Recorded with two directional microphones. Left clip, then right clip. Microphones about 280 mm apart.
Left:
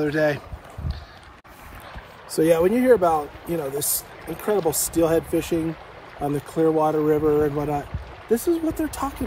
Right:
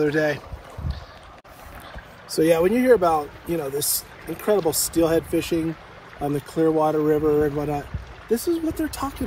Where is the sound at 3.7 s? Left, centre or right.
Right.